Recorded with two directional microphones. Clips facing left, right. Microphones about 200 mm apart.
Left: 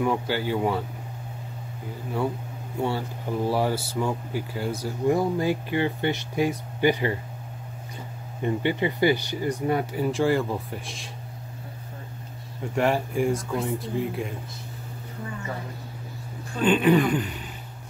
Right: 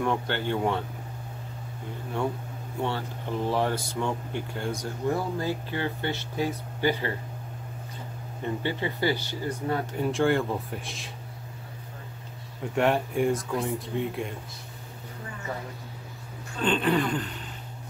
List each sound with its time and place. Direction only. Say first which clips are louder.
0.0 s speech: left 3 dB; 5° left (ahead or behind)
2.8 s speech: left 3 dB; 10° left (ahead or behind)
8.6 s speech: left 5 dB; 15° left (ahead or behind)
9.9 s speech: right 1 dB; centre (ahead or behind)
12.7 s speech: left 1 dB; centre (ahead or behind)
16.6 s speech: left 5 dB; 10° left (ahead or behind)